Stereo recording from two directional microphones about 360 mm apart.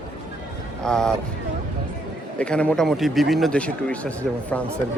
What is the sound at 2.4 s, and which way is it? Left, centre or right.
A man's voice, centre.